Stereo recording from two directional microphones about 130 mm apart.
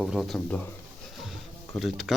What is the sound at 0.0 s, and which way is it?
Speech, centre (ahead or behind).